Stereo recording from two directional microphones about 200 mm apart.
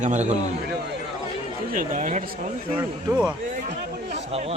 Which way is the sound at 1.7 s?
40° right (ahead or behind).